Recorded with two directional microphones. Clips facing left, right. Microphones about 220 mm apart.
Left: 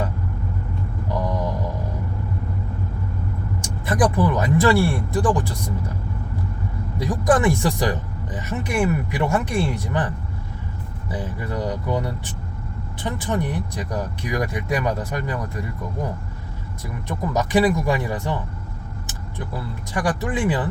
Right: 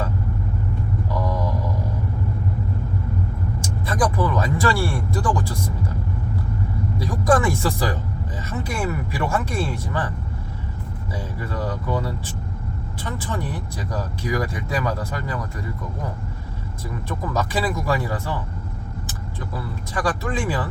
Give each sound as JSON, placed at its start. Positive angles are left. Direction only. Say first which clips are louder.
{"t": 3.8, "sound": "speech", "louder": "left 3 dB", "side_deg": 20}
{"t": 7.0, "sound": "speech", "louder": "left 1 dB", "side_deg": 20}
{"t": 11.1, "sound": "speech", "louder": "left 3 dB", "side_deg": 20}
{"t": 13.7, "sound": "speech", "louder": "left 1 dB", "side_deg": 20}
{"t": 17.1, "sound": "speech", "louder": "left 4 dB", "side_deg": 20}
{"t": 19.9, "sound": "speech", "louder": "left 1 dB", "side_deg": 20}